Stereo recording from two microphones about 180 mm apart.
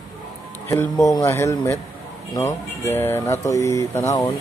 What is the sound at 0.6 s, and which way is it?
Speech, 15° left (ahead or behind).